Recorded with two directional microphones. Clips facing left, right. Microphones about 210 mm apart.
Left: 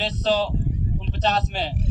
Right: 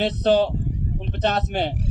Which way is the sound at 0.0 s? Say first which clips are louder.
Right 4 dB; 50° right (ahead or behind).